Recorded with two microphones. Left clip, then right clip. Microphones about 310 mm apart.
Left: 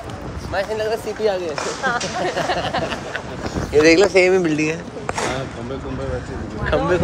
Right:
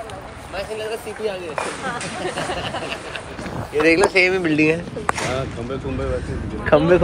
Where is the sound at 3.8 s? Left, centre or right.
Centre.